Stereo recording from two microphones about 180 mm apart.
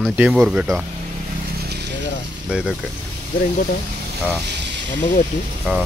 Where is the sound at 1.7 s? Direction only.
65° right (ahead or behind).